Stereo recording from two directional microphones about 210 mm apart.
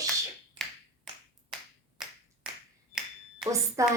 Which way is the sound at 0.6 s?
Centre (ahead or behind).